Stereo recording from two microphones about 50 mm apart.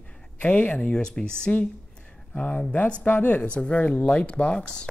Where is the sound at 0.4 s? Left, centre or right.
Left.